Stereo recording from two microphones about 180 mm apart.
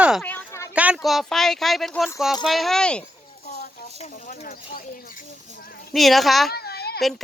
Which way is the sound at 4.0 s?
45° left (ahead or behind).